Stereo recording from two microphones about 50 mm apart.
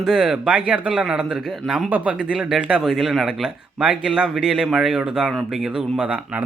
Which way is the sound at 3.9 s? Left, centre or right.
Centre.